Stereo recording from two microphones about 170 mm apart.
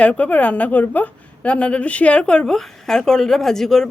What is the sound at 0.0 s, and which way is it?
A woman's voice, 10° left (ahead or behind).